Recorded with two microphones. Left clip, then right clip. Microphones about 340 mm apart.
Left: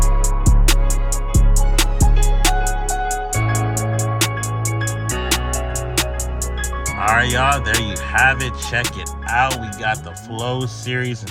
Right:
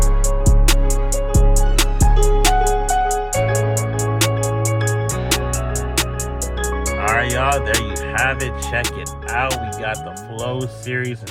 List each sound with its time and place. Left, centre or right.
0.4 s music: centre
6.6 s music: centre
9.3 s speech: centre